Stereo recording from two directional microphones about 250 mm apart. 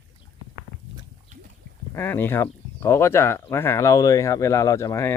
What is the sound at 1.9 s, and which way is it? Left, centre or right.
Speech, centre.